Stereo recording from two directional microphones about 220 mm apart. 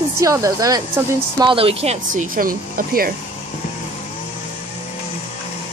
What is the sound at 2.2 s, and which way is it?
Speech, 40° right (ahead or behind).